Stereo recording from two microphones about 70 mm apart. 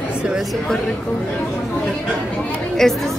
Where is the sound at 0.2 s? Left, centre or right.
Centre.